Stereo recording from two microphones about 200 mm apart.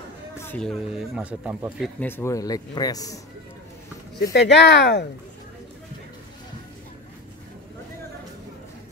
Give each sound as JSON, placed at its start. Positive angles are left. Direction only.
{"t": 0.4, "sound": "speech", "side_deg": 5}
{"t": 2.0, "sound": "speech", "side_deg": 10}
{"t": 4.3, "sound": "speech", "side_deg": 60}